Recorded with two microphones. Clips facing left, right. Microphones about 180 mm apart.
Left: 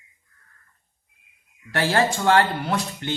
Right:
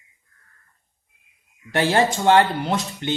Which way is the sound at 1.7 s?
20° right (ahead or behind).